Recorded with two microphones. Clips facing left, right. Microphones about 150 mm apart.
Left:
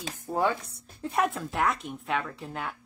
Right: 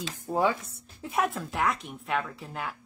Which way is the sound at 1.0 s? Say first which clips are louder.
Left 1 dB; centre (ahead or behind).